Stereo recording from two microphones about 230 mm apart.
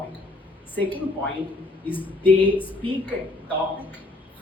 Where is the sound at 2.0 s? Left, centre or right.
Centre.